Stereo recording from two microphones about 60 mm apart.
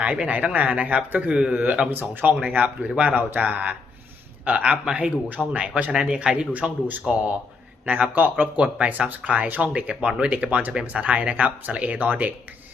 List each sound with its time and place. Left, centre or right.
0.0 s speech: right
1.9 s speech: right
3.2 s speech: right